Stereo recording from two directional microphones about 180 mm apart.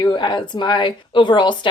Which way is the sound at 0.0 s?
25° left (ahead or behind).